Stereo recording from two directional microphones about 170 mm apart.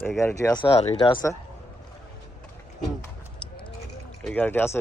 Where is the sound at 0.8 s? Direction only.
40° left (ahead or behind).